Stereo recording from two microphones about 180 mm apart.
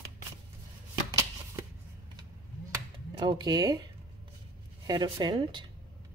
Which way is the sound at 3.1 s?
25° right (ahead or behind).